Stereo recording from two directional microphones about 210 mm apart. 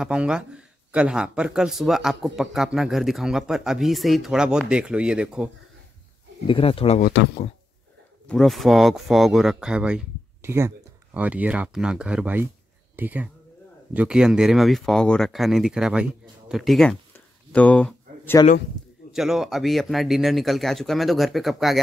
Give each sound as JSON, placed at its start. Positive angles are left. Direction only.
{"t": 0.0, "sound": "speech", "side_deg": -5}
{"t": 6.4, "sound": "speech", "side_deg": 25}
{"t": 7.0, "sound": "speech", "side_deg": 45}
{"t": 8.3, "sound": "speech", "side_deg": 0}
{"t": 17.5, "sound": "a sound", "side_deg": 5}
{"t": 19.1, "sound": "speech", "side_deg": 0}